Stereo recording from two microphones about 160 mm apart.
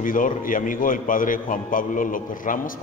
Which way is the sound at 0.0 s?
60° left (ahead or behind).